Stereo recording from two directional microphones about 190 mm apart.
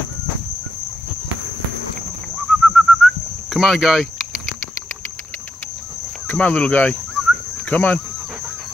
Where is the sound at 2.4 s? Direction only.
5° left (ahead or behind).